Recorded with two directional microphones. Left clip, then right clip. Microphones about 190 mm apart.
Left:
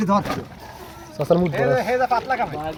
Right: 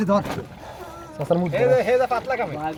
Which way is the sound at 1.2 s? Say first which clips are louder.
Left 4 dB; 50° left (ahead or behind).